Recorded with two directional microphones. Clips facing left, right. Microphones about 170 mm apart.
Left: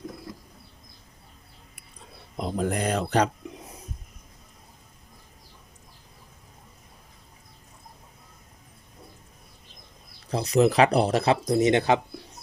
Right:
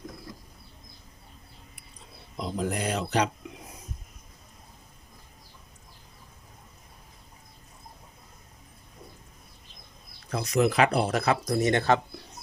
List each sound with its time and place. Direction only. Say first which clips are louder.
2.4 s speech: left 3 dB; 50° left (ahead or behind)
10.2 s speech: left 4 dB; 35° left (ahead or behind); by 11.9 s 15° left (ahead or behind)